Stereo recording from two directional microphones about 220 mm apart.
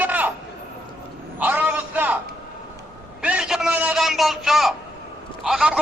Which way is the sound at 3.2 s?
5° right (ahead or behind).